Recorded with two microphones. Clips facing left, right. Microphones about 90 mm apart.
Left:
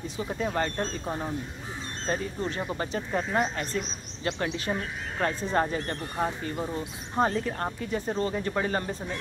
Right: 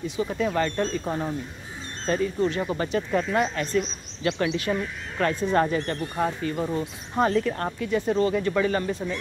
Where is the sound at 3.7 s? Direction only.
65° right (ahead or behind).